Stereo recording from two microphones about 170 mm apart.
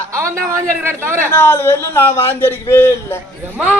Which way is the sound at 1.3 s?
15° left (ahead or behind).